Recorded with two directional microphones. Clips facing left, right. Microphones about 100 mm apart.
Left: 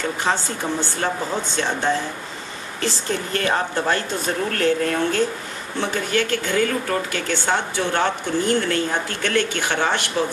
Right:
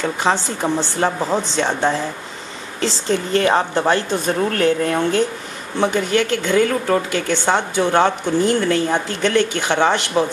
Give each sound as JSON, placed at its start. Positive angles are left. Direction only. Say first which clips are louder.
{"t": 0.2, "sound": "a woman's voice", "louder": "right 5 dB", "side_deg": -20}